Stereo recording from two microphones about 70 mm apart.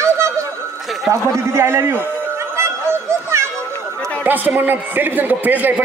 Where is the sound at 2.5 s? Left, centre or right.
Right.